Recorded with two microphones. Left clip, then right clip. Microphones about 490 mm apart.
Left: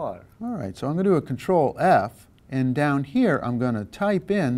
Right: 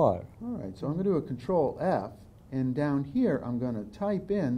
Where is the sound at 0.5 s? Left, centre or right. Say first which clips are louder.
Left 7 dB; left.